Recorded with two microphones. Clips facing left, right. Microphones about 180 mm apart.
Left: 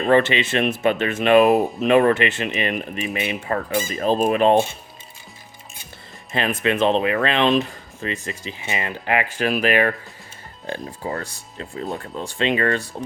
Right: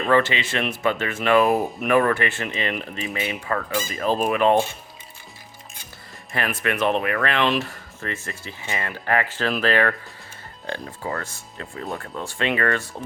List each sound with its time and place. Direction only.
0.1 s speech: 20° left (ahead or behind)
6.3 s speech: 20° left (ahead or behind)